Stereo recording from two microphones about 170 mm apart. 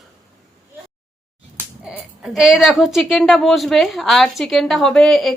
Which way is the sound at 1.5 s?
5° right (ahead or behind).